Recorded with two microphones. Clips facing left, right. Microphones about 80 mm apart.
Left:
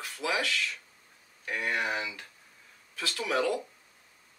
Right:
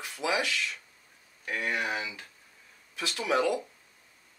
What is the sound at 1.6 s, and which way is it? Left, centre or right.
Speech, centre.